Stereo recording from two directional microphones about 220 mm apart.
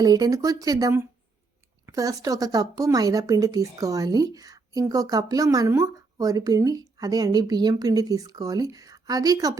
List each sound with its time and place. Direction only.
0.0 s speech: 15° right (ahead or behind)